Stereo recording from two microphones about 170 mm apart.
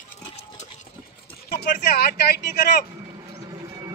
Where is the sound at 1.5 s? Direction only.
70° left (ahead or behind).